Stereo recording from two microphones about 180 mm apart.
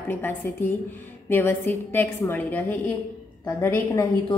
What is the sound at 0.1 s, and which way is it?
A woman's voice, 10° left (ahead or behind).